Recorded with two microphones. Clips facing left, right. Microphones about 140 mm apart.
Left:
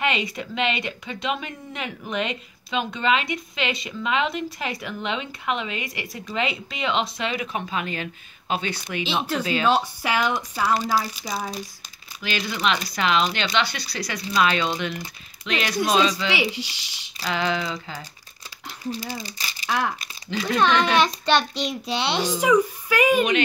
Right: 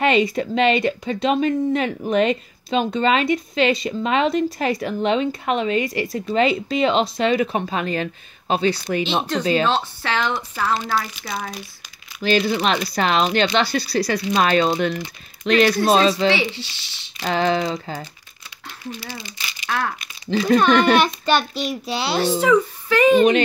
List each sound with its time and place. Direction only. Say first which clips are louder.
0.0 s speech: right 8 dB; 35° right (ahead or behind)
9.7 s speech: even; 10° left (ahead or behind)
12.2 s speech: right 8 dB; 35° right (ahead or behind)
16.3 s speech: right 1 dB; 15° left (ahead or behind)
17.2 s speech: right 5 dB; 35° right (ahead or behind)
18.9 s speech: left 3 dB; 40° left (ahead or behind)
20.2 s speech: right 8 dB; 35° right (ahead or behind)
20.5 s a child's voice: right 4 dB; 5° right (ahead or behind)
22.4 s speech: left 1 dB; 10° left (ahead or behind)